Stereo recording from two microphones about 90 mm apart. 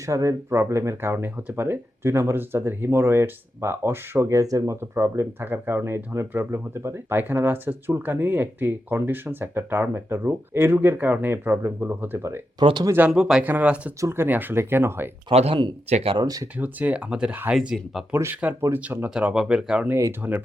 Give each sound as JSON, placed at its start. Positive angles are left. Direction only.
{"t": 0.0, "sound": "speech", "side_deg": -35}
{"t": 12.5, "sound": "speech", "side_deg": -55}
{"t": 13.1, "sound": "speech", "side_deg": -5}
{"t": 14.0, "sound": "speech", "side_deg": -25}
{"t": 15.3, "sound": "speech", "side_deg": -75}
{"t": 16.6, "sound": "speech", "side_deg": -20}
{"t": 18.1, "sound": "speech", "side_deg": -25}
{"t": 19.4, "sound": "speech", "side_deg": -10}
{"t": 20.2, "sound": "speech", "side_deg": -25}